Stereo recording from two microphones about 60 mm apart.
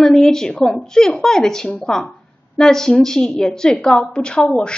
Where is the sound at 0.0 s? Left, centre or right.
Centre.